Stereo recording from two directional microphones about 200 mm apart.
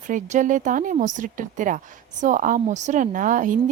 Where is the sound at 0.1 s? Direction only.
40° right (ahead or behind).